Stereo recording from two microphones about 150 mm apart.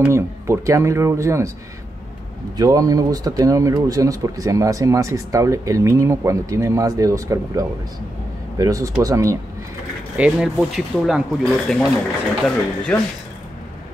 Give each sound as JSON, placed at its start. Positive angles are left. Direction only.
{"t": 0.0, "sound": "speech", "side_deg": -20}
{"t": 2.5, "sound": "speech", "side_deg": -25}
{"t": 10.1, "sound": "speech", "side_deg": -5}